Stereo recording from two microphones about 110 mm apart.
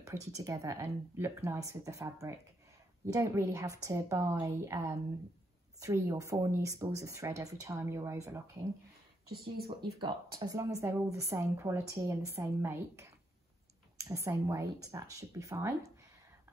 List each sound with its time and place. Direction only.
0.0 s speech: 30° right (ahead or behind)
9.7 s speech: 45° right (ahead or behind); by 15.9 s 30° right (ahead or behind)